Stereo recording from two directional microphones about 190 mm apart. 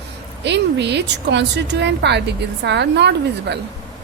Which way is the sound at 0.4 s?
65° right (ahead or behind).